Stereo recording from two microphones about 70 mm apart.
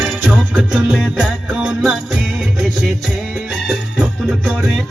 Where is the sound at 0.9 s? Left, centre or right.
Centre.